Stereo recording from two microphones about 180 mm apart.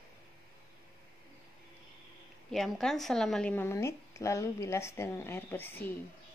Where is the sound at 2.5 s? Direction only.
Centre (ahead or behind).